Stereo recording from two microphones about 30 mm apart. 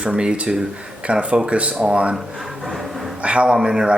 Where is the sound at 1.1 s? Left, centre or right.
Right.